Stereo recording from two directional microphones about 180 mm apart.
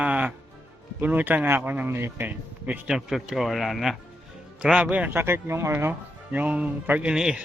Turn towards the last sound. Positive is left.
turn(degrees=-5)  # may be behind; listen again after turning